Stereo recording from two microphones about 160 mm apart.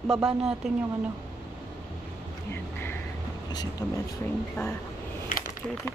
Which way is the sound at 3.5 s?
25° left (ahead or behind).